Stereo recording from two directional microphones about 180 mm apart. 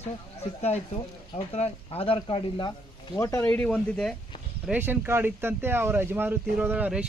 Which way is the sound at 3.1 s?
15° left (ahead or behind).